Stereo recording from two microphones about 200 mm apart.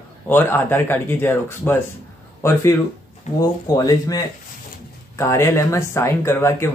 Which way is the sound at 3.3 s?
35° left (ahead or behind).